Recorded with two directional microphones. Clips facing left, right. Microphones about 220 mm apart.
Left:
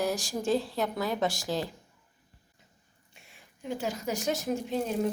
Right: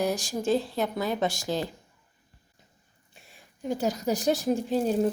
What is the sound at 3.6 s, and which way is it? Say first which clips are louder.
A woman's voice: right 5 dB; 40° right (ahead or behind).